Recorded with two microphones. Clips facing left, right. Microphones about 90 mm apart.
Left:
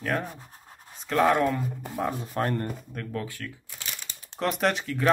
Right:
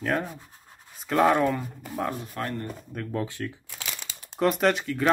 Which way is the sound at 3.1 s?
25° right (ahead or behind).